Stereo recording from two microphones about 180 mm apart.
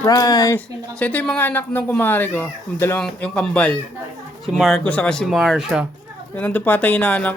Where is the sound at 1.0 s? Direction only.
10° left (ahead or behind).